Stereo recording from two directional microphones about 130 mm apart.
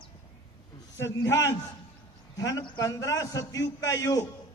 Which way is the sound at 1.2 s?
25° left (ahead or behind).